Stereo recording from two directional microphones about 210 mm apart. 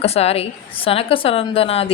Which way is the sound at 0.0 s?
30° left (ahead or behind).